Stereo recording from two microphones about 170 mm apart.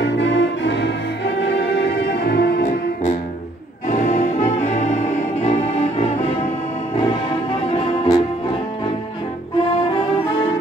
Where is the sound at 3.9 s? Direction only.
45° left (ahead or behind).